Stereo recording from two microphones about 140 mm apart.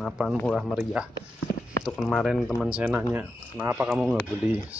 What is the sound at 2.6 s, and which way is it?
Speech, 10° right (ahead or behind).